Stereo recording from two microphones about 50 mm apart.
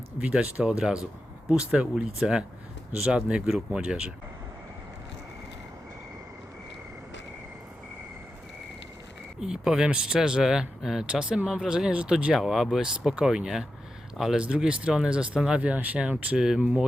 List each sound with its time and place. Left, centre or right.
0.2 s speech: right
0.6 s speech: centre
9.4 s speech: centre
14.6 s speech: centre